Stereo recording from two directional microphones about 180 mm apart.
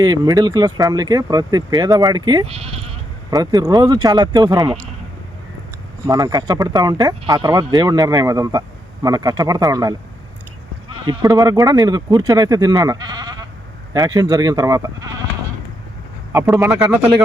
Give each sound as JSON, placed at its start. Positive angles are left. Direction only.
{"t": 0.0, "sound": "speech", "side_deg": -20}
{"t": 3.2, "sound": "speech", "side_deg": -20}
{"t": 6.1, "sound": "speech", "side_deg": -20}
{"t": 11.0, "sound": "speech", "side_deg": -20}
{"t": 16.5, "sound": "speech", "side_deg": -5}